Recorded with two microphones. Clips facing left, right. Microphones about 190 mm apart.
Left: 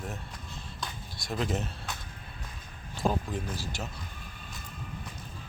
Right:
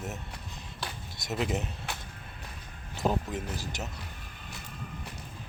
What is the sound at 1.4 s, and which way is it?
Speech, 15° right (ahead or behind).